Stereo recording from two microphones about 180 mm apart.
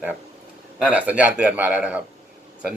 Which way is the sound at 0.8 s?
5° right (ahead or behind).